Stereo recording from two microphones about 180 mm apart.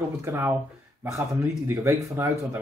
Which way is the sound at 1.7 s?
15° right (ahead or behind).